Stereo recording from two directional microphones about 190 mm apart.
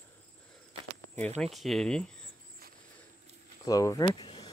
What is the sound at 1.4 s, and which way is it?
Speech, centre (ahead or behind).